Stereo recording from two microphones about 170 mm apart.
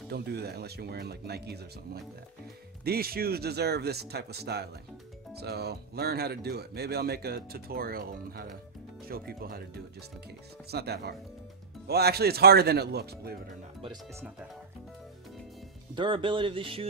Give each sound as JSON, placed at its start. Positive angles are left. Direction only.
{"t": 0.1, "sound": "speech", "side_deg": -75}
{"t": 2.8, "sound": "speech", "side_deg": -65}
{"t": 10.7, "sound": "speech", "side_deg": -70}
{"t": 15.9, "sound": "speech", "side_deg": -30}